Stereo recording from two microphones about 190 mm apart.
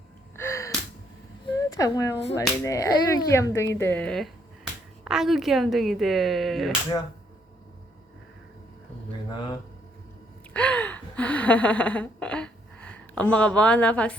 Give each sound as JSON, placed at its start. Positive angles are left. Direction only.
{"t": 0.3, "sound": "gasp", "side_deg": 15}
{"t": 1.5, "sound": "speech", "side_deg": 20}
{"t": 10.5, "sound": "gasp", "side_deg": 5}